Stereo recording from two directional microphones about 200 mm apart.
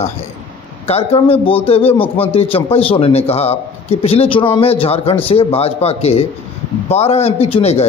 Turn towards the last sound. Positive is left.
turn(degrees=30)  # may be behind; listen again after turning